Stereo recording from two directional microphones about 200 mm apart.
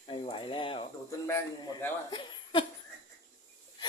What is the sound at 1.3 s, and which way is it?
Speech, 15° left (ahead or behind).